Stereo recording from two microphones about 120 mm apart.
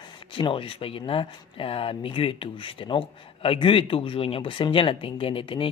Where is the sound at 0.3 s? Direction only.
50° left (ahead or behind).